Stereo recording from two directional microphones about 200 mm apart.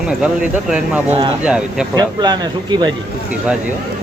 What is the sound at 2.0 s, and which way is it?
Speech, 20° right (ahead or behind).